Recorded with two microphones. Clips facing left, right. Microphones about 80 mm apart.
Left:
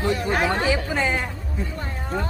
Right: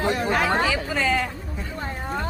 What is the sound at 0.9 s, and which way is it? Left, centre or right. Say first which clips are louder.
Speech: right 1 dB; left.